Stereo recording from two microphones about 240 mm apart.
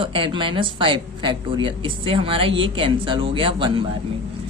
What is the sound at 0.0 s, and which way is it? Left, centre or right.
Speech, right.